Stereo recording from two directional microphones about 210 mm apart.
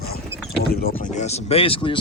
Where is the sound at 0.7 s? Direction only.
45° left (ahead or behind); by 2.0 s 25° left (ahead or behind).